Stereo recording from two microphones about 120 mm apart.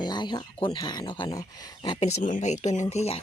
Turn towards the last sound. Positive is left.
turn(degrees=60)  # may be behind; listen again after turning